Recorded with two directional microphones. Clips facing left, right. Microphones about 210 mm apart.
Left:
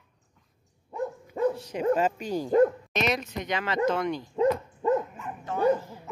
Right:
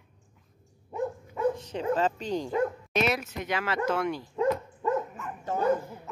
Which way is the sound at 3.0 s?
5° right (ahead or behind).